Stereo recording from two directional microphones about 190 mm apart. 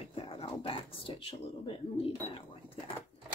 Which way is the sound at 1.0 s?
25° left (ahead or behind).